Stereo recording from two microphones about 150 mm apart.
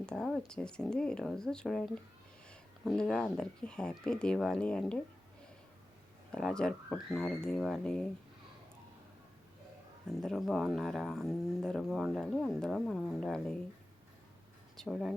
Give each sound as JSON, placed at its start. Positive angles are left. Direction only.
{"t": 0.0, "sound": "speech", "side_deg": 5}
{"t": 6.3, "sound": "speech", "side_deg": 5}
{"t": 10.1, "sound": "speech", "side_deg": 0}
{"t": 14.8, "sound": "speech", "side_deg": 0}